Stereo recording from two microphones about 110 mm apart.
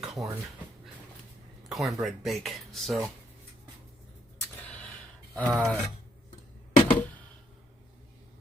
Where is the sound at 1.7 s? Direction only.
Centre (ahead or behind).